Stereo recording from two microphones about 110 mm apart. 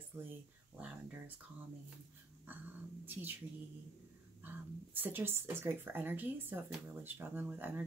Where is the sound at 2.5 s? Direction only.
15° right (ahead or behind).